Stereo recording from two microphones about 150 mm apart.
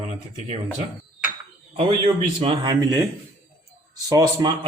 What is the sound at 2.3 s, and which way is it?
Speech, 45° right (ahead or behind).